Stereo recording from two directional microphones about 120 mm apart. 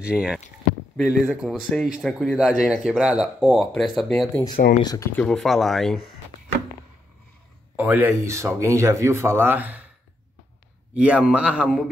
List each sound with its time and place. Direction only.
0.0 s a man's voice: 10° right (ahead or behind)
0.9 s speech: centre (ahead or behind)
4.5 s speech: 35° left (ahead or behind)
5.1 s speech: 5° left (ahead or behind)
7.7 s speech: 15° right (ahead or behind)
11.0 s a man's voice: 10° right (ahead or behind)